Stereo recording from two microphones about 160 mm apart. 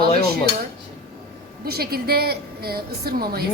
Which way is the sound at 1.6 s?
75° right (ahead or behind).